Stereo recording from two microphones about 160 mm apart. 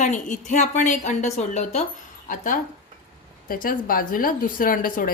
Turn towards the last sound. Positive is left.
turn(degrees=60)  # may be behind; listen again after turning